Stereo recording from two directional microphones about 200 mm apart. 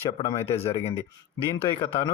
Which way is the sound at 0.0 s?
30° left (ahead or behind).